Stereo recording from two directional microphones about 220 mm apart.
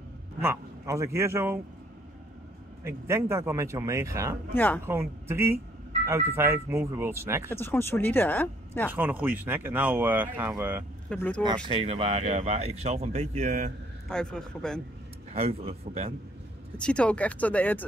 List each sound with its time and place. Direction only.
0.4 s speech: 10° right (ahead or behind)
2.8 s speech: 10° right (ahead or behind)
4.6 s speech: 10° left (ahead or behind)
4.8 s speech: 10° right (ahead or behind)
7.5 s speech: 10° left (ahead or behind)
8.9 s speech: 10° right (ahead or behind)
11.1 s speech: 5° left (ahead or behind)
11.4 s speech: 20° right (ahead or behind)
14.0 s speech: 5° left (ahead or behind)
15.3 s speech: 25° right (ahead or behind)
16.7 s speech: 5° left (ahead or behind)